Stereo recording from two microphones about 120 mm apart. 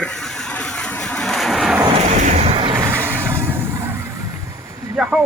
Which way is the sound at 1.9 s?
75° right (ahead or behind).